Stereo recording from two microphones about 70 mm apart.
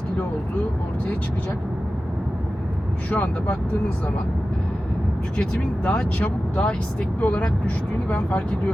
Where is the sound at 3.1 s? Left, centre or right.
Left.